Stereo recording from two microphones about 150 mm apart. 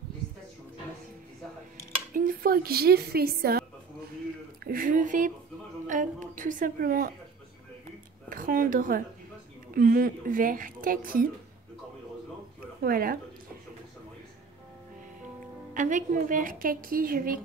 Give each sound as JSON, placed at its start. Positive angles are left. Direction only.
{"t": 2.1, "sound": "a woman's voice", "side_deg": -75}
{"t": 4.6, "sound": "a woman's voice", "side_deg": -70}
{"t": 8.3, "sound": "a woman's voice", "side_deg": -70}
{"t": 12.8, "sound": "a woman's voice", "side_deg": -75}
{"t": 15.7, "sound": "a woman's voice", "side_deg": -60}